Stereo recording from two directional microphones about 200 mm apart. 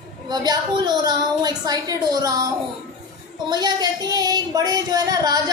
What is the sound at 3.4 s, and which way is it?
Speech, 20° right (ahead or behind).